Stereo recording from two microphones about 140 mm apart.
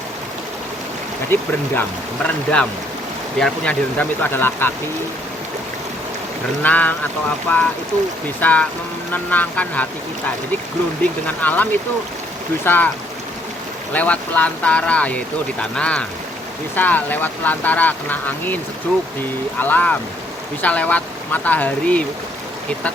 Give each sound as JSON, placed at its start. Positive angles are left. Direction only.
{"t": 1.3, "sound": "speech", "side_deg": 15}
{"t": 6.6, "sound": "speech", "side_deg": 10}
{"t": 11.0, "sound": "speech", "side_deg": 10}
{"t": 13.9, "sound": "speech", "side_deg": 10}